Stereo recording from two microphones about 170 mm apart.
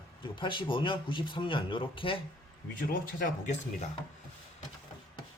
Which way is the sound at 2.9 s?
55° left (ahead or behind).